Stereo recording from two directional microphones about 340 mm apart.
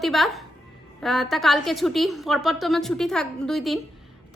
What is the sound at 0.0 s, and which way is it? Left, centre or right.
A woman's voice, centre.